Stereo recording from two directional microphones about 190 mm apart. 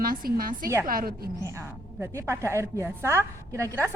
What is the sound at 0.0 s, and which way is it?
A woman's voice, 50° right (ahead or behind).